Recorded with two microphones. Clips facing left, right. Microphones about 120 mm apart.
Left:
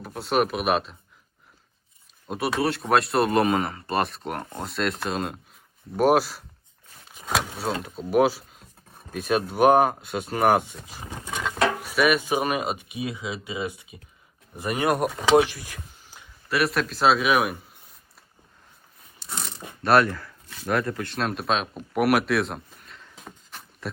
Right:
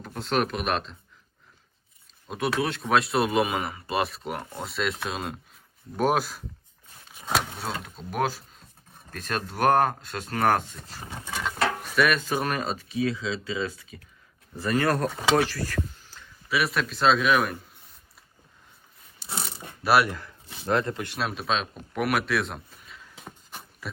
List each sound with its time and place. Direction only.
0.0 s speech: 5° left (ahead or behind)
2.2 s speech: 5° left (ahead or behind)
11.3 s a sound: centre (ahead or behind)
11.8 s speech: 5° left (ahead or behind)
15.4 s a sound: 15° left (ahead or behind)
16.5 s speech: centre (ahead or behind)
19.2 s a sound: 5° right (ahead or behind)
19.8 s speech: 5° right (ahead or behind)
20.1 s speech: 20° right (ahead or behind)
21.2 s speech: centre (ahead or behind)